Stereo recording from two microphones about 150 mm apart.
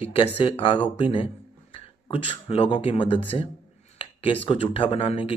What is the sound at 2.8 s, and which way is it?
Speech, 35° left (ahead or behind).